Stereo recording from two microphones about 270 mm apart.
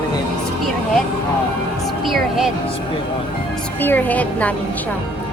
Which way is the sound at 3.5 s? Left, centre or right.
Centre.